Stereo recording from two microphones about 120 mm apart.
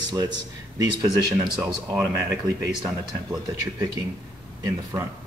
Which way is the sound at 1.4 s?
30° right (ahead or behind).